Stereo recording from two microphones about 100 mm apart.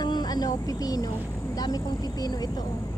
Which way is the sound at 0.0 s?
45° left (ahead or behind).